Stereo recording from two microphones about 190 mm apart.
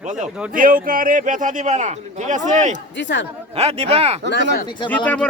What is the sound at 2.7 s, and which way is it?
Speech, 70° left (ahead or behind).